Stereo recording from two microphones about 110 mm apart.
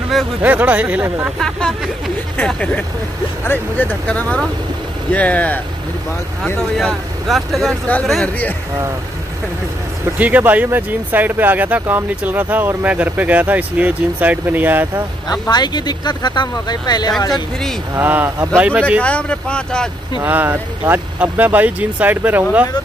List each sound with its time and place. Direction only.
0.4 s speech: 15° right (ahead or behind)
1.4 s speech: 5° left (ahead or behind)
10.1 s speech: 15° right (ahead or behind)
15.4 s speech: 40° left (ahead or behind)
17.9 s speech: 20° right (ahead or behind)
18.9 s speech: 10° left (ahead or behind)
20.2 s speech: 15° right (ahead or behind)